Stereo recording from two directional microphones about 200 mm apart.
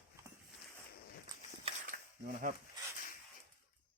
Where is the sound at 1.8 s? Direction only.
45° right (ahead or behind).